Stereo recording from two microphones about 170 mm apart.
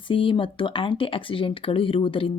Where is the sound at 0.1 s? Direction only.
30° left (ahead or behind).